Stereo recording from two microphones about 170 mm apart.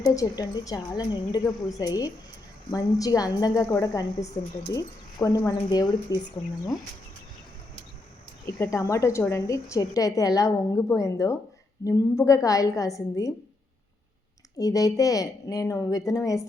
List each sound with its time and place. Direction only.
0.0 s a woman's voice: 20° left (ahead or behind)
8.7 s a woman's voice: 20° left (ahead or behind)
14.6 s a woman's voice: 20° left (ahead or behind)